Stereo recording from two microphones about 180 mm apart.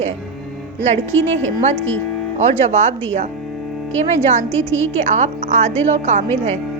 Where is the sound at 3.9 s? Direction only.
40° right (ahead or behind).